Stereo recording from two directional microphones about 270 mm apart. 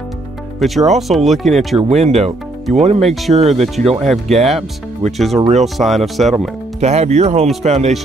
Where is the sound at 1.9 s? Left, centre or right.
Right.